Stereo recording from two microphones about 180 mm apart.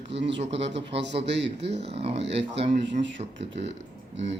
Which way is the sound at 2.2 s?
75° right (ahead or behind).